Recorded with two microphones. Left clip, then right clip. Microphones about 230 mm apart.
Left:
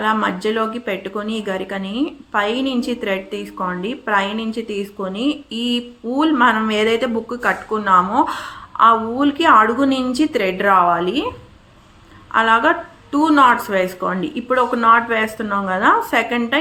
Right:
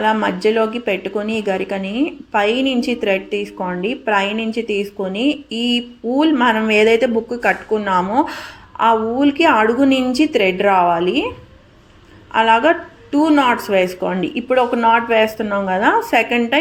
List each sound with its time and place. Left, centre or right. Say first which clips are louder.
0.0 s speech: right 2 dB; centre
5.5 s a sound: right 3 dB; right
6.1 s speech: even; centre
12.3 s a woman's voice: right 1 dB; centre